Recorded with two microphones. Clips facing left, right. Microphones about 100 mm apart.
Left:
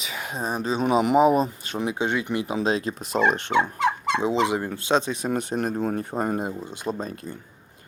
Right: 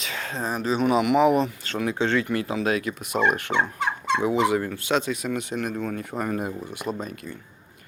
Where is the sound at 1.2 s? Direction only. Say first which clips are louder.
Left 1 dB; 20° left (ahead or behind).